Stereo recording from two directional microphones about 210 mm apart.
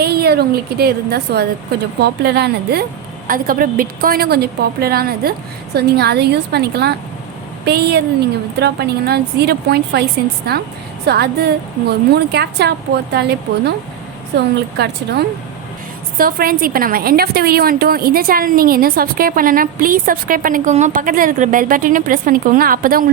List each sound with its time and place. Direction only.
0.0 s a woman's voice: 50° right (ahead or behind)
11.0 s a woman's voice: 50° right (ahead or behind)